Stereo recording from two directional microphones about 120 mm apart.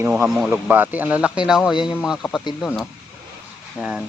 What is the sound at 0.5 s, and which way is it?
Speech, 15° right (ahead or behind).